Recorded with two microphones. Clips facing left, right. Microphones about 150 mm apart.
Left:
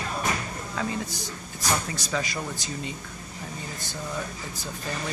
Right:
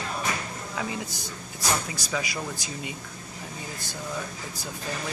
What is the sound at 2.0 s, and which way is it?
Speech, 10° right (ahead or behind).